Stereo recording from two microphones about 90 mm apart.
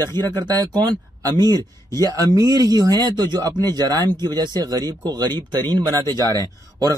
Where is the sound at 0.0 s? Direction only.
50° right (ahead or behind).